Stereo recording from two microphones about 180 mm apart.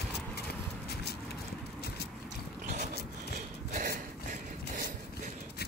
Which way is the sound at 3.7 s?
50° right (ahead or behind).